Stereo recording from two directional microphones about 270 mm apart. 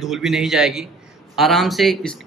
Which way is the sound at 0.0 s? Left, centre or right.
Centre.